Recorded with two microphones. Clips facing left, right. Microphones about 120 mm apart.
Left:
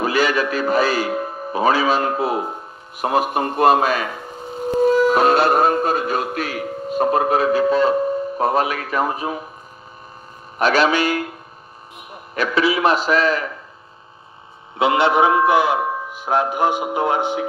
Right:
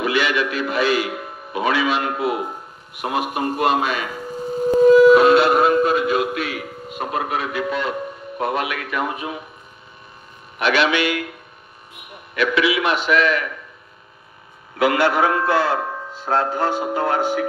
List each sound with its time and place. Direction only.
0.0 s a man's voice: 40° left (ahead or behind)
5.1 s a man's voice: 40° left (ahead or behind)
10.6 s a man's voice: 40° left (ahead or behind)
12.4 s a man's voice: 35° left (ahead or behind)
14.8 s a man's voice: 20° left (ahead or behind)